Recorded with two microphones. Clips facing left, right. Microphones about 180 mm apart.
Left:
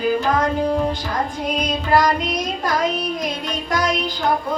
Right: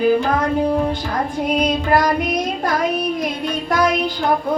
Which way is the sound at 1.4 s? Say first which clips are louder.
Right 4 dB; 55° right (ahead or behind).